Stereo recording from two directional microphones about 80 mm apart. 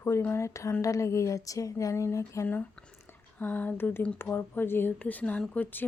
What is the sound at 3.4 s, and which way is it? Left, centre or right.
Speech, left.